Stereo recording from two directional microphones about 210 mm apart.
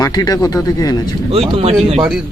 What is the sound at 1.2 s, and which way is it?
Speech, 25° right (ahead or behind).